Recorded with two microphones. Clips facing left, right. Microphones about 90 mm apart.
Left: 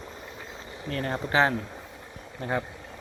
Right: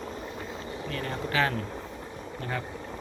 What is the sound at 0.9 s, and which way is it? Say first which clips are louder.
Speech: left 4 dB; 40° left (ahead or behind).